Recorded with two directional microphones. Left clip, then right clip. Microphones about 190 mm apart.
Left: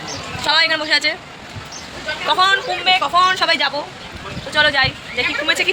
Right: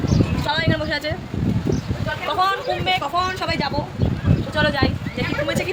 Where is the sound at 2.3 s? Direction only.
Centre (ahead or behind).